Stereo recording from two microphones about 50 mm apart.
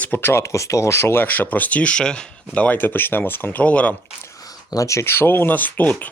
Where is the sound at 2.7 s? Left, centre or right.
Left.